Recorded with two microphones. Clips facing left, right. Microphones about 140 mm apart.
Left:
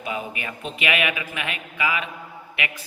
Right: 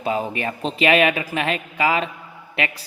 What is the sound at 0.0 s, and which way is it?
Speech, 35° right (ahead or behind).